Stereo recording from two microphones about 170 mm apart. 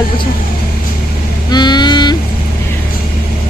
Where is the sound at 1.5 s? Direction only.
25° left (ahead or behind).